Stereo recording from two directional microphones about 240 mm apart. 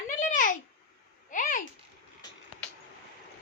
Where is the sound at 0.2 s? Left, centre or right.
Left.